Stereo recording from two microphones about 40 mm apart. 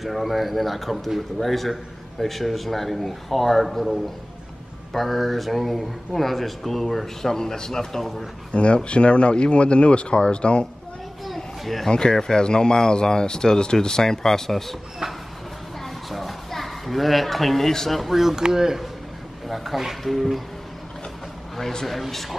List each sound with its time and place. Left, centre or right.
0.0 s a man's voice: centre
8.5 s speech: left
11.3 s a sound: centre
11.9 s speech: centre
15.8 s a sound: centre
18.1 s speech: centre
19.4 s a man's voice: centre
21.5 s a man's voice: centre